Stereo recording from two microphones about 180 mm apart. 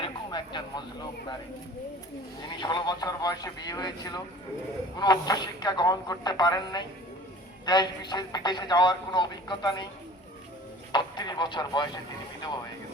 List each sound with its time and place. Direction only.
0.0 s a sound: 25° left (ahead or behind)
2.6 s speech: 25° left (ahead or behind)
10.9 s speech: 25° left (ahead or behind)